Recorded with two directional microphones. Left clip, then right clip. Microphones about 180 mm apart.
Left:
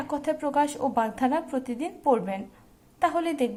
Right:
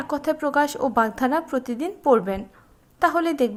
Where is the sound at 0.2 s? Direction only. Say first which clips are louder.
Right 4 dB; 20° right (ahead or behind).